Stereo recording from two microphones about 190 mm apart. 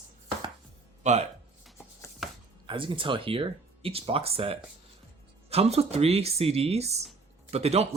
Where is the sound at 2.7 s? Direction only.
25° right (ahead or behind).